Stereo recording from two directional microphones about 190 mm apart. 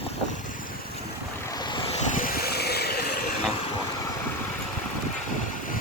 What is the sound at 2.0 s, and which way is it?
Vehicle, 45° left (ahead or behind).